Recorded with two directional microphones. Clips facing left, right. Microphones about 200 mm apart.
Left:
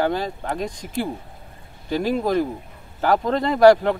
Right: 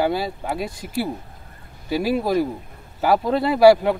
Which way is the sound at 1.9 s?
10° right (ahead or behind).